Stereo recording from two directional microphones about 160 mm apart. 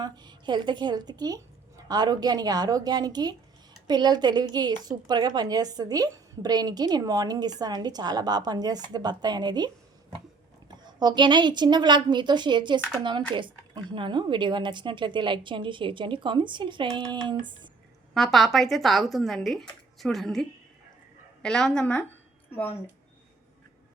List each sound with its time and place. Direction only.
0.0 s a woman's voice: 25° right (ahead or behind)
10.7 s a woman's voice: 25° right (ahead or behind)
18.1 s speech: centre (ahead or behind)